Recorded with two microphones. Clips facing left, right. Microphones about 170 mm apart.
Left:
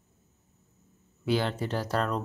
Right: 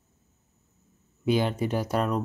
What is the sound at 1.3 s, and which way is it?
Speech, 15° right (ahead or behind).